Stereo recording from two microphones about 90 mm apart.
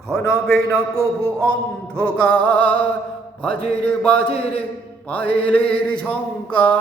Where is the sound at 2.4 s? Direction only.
70° left (ahead or behind).